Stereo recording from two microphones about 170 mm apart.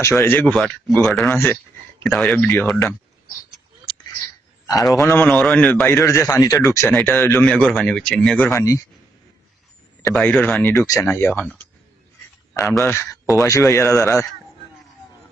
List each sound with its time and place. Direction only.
0.0 s a man's voice: 15° left (ahead or behind)
4.6 s a man's voice: 20° left (ahead or behind)
5.9 s a man's voice: 15° left (ahead or behind)
10.1 s speech: 5° left (ahead or behind)
10.7 s a man's voice: 20° left (ahead or behind)
12.8 s a man's voice: 15° left (ahead or behind)